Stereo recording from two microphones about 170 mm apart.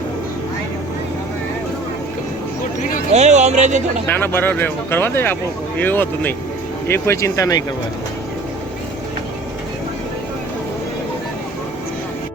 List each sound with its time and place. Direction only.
3.1 s speech: 40° right (ahead or behind)
4.0 s speech: 15° left (ahead or behind)